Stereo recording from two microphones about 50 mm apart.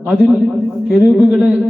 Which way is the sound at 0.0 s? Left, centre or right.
Centre.